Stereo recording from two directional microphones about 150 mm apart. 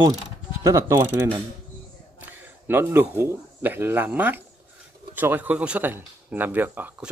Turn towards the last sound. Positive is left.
turn(degrees=-10)  # may be behind; listen again after turning